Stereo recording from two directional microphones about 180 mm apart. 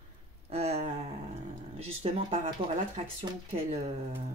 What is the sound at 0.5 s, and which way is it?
Speech, 35° right (ahead or behind).